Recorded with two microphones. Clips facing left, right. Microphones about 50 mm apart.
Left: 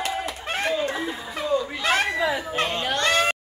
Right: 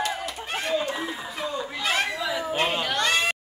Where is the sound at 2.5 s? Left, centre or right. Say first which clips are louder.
Even; centre.